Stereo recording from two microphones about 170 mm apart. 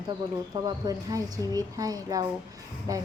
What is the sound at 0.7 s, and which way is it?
Speech, 20° right (ahead or behind).